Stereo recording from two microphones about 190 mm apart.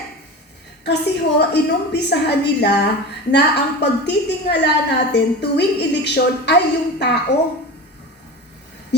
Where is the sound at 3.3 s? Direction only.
60° left (ahead or behind).